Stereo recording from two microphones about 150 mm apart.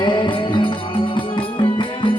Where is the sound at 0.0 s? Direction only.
30° left (ahead or behind).